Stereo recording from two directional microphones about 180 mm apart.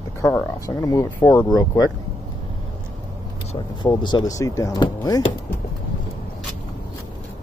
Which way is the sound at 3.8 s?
25° left (ahead or behind).